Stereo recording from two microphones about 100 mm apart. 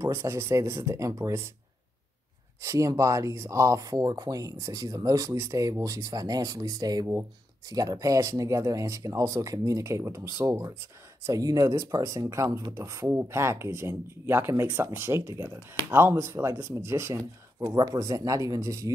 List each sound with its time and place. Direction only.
0.0 s speech: 25° right (ahead or behind)
2.6 s speech: 30° right (ahead or behind)
11.2 s speech: 35° right (ahead or behind)